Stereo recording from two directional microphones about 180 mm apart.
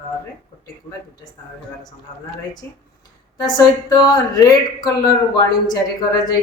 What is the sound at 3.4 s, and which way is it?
A woman's voice, 20° left (ahead or behind).